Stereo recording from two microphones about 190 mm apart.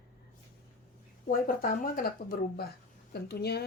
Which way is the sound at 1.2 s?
45° left (ahead or behind).